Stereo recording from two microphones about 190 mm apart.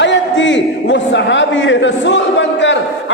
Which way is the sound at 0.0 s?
70° left (ahead or behind).